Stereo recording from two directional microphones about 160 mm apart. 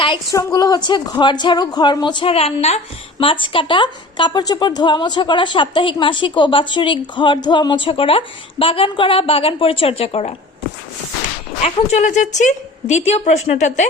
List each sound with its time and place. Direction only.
0.3 s speech: 20° left (ahead or behind); by 10.3 s 40° left (ahead or behind)
11.6 s a woman's voice: 45° left (ahead or behind)